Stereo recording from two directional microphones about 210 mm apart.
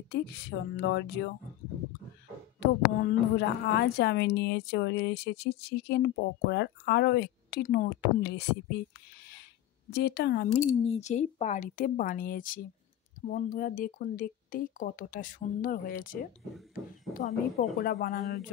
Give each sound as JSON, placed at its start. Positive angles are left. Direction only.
{"t": 0.1, "sound": "speech", "side_deg": 50}
{"t": 2.6, "sound": "a woman's voice", "side_deg": 50}
{"t": 9.8, "sound": "a woman's voice", "side_deg": 50}
{"t": 10.5, "sound": "a woman's voice", "side_deg": 35}